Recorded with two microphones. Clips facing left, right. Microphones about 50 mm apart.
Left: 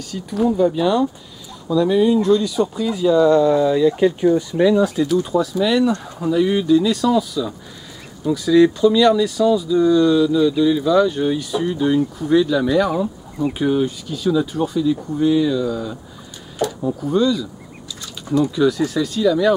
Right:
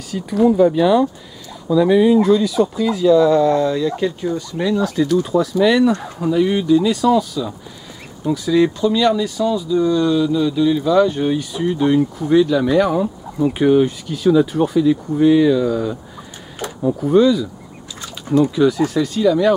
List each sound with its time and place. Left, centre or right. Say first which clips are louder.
0.1 s speech: right 4 dB; centre
4.6 s speech: left 3 dB; centre
12.2 s speech: right 2 dB; centre
14.5 s speech: right 4 dB; right
15.6 s speech: right 4 dB; centre
18.2 s speech: right 3 dB; right
18.5 s speech: right 2 dB; centre